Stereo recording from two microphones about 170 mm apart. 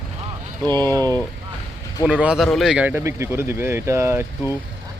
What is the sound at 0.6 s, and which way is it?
Speech, 10° left (ahead or behind).